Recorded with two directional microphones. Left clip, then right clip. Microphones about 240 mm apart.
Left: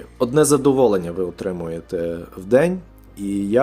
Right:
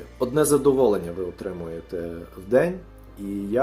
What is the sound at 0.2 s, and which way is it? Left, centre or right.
Speech, left.